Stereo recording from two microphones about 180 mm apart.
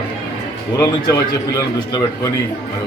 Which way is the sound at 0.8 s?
20° left (ahead or behind).